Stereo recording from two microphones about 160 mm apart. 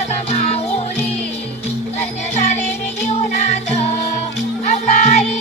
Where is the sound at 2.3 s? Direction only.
45° left (ahead or behind).